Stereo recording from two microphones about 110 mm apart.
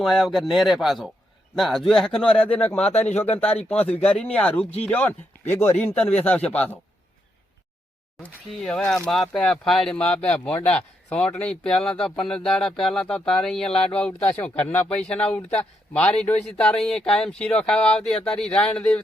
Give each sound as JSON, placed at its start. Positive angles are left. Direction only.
{"t": 0.0, "sound": "speech", "side_deg": 0}
{"t": 3.1, "sound": "speech", "side_deg": 85}
{"t": 3.5, "sound": "speech", "side_deg": 65}
{"t": 3.8, "sound": "speech", "side_deg": 10}
{"t": 8.4, "sound": "speech", "side_deg": 5}